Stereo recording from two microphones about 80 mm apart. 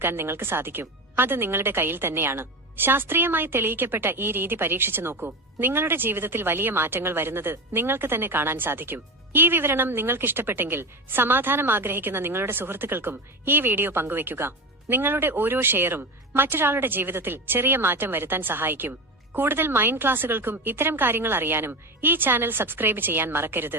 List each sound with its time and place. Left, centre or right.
0.0 s speech: right